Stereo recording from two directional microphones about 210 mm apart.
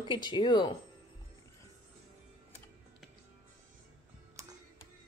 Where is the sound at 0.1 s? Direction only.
20° left (ahead or behind).